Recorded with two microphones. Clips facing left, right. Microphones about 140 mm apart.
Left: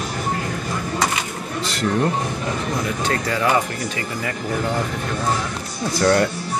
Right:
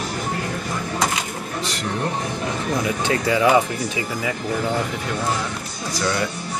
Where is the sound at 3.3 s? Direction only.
15° right (ahead or behind).